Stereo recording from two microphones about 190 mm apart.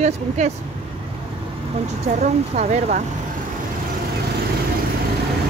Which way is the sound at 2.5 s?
40° right (ahead or behind).